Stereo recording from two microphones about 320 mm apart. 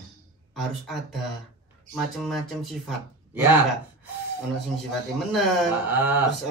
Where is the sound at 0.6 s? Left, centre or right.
Centre.